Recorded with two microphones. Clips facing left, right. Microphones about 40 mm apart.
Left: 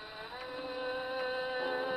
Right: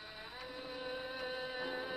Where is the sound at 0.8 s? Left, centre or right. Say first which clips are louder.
Left 7 dB; centre.